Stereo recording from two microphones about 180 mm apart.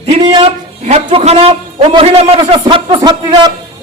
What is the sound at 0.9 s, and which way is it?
A man's voice, 35° right (ahead or behind).